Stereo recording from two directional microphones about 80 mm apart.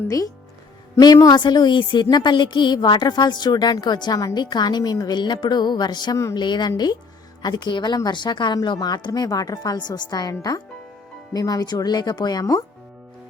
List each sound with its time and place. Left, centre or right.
0.9 s a woman's voice: left
9.2 s speech: left
9.7 s a woman's voice: left